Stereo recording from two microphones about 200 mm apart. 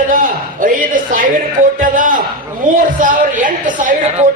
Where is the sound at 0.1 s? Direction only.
40° right (ahead or behind).